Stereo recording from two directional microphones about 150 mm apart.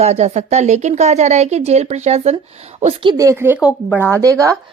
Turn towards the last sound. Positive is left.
turn(degrees=-20)  # may be behind; listen again after turning